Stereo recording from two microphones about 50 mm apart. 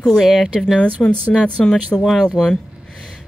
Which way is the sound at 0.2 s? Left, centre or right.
Centre.